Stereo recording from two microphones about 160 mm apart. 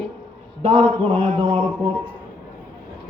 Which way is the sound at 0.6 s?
35° right (ahead or behind).